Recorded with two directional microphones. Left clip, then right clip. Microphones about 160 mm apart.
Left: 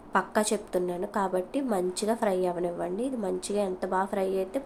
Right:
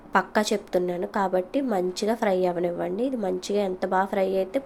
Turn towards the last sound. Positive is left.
turn(degrees=-15)  # may be behind; listen again after turning